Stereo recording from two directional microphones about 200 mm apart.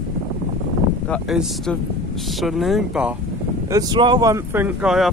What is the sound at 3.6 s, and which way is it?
Speech, 20° right (ahead or behind).